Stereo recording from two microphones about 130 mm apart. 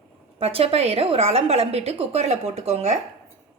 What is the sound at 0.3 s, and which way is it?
A woman's voice, 50° right (ahead or behind).